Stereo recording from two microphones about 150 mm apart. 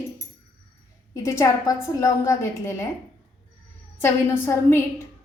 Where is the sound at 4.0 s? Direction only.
15° left (ahead or behind).